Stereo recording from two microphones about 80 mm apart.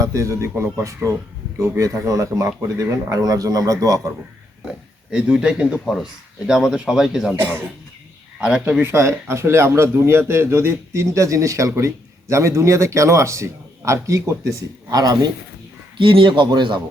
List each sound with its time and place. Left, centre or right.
0.0 s speech: right
5.1 s speech: centre
8.4 s speech: centre
8.8 s speech: right
16.0 s speech: right